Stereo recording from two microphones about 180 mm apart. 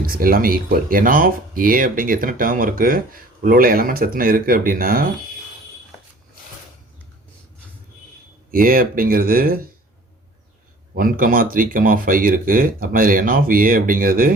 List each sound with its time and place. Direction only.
0.0 s speech: 55° right (ahead or behind)
8.4 s speech: 50° right (ahead or behind)
10.9 s speech: 55° right (ahead or behind)